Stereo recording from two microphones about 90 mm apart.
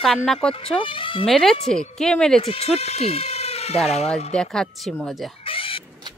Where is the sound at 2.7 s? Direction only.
5° right (ahead or behind).